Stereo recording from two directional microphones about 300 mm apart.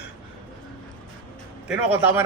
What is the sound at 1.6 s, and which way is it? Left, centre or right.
Speech, centre.